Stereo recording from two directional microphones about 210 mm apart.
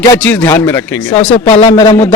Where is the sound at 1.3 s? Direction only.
30° left (ahead or behind).